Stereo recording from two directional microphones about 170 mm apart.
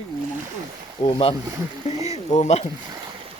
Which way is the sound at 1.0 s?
35° left (ahead or behind).